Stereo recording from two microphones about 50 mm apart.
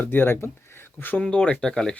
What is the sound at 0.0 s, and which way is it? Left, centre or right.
Speech, left.